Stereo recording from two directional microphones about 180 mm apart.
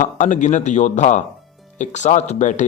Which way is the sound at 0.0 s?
45° left (ahead or behind).